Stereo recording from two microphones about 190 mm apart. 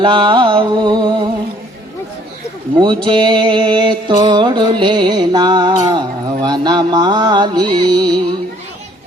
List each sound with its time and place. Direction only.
0.0 s music: 25° right (ahead or behind)
2.8 s music: 25° right (ahead or behind)